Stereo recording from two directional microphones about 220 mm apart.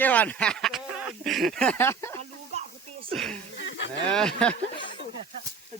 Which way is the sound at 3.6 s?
55° left (ahead or behind).